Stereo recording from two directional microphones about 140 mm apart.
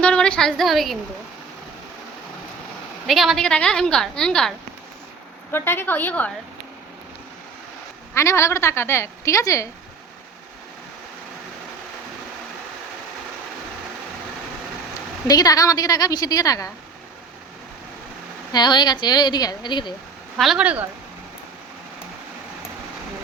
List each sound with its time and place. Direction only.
0.0 s a woman's voice: 5° left (ahead or behind)
3.1 s a woman's voice: centre (ahead or behind)
5.5 s a woman's voice: 15° left (ahead or behind)
8.1 s a woman's voice: 20° left (ahead or behind)
15.3 s a woman's voice: 25° left (ahead or behind)
18.5 s a woman's voice: 30° left (ahead or behind)
20.3 s speech: 5° right (ahead or behind)